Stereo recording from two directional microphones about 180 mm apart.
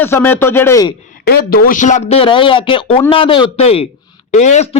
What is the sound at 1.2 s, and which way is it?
A man's voice, 60° left (ahead or behind).